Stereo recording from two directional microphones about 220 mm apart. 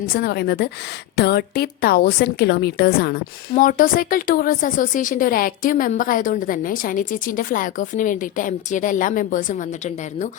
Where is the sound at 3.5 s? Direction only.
35° left (ahead or behind).